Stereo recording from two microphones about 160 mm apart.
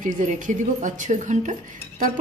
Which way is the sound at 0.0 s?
50° right (ahead or behind).